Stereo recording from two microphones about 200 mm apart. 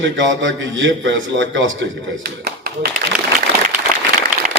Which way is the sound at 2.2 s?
50° right (ahead or behind).